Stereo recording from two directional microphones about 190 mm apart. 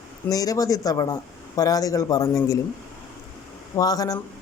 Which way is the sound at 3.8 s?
20° left (ahead or behind).